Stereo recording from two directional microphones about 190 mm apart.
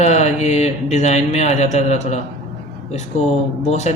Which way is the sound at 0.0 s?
35° left (ahead or behind).